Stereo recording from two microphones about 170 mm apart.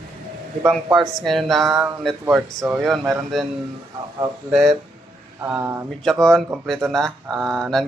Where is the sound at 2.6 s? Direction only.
15° right (ahead or behind).